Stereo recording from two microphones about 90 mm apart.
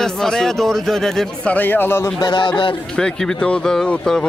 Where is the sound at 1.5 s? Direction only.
20° left (ahead or behind).